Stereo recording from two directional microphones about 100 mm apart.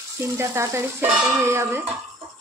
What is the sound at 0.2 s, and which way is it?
A woman's voice, 25° right (ahead or behind).